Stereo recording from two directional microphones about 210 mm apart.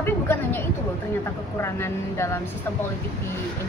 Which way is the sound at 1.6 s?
10° left (ahead or behind).